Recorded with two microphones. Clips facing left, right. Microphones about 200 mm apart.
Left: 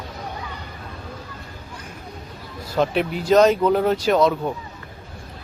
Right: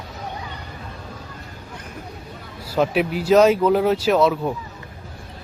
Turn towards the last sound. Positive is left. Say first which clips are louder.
# even
turn(degrees=-5)  # may be behind; listen again after turning